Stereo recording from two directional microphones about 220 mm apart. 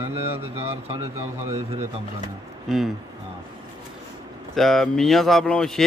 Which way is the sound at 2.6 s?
Centre (ahead or behind).